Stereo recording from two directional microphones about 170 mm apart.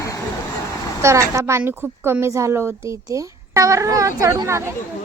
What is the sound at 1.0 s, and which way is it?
A woman's voice, 15° right (ahead or behind).